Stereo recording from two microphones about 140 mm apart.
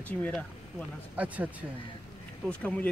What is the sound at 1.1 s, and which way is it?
Speech, 10° right (ahead or behind).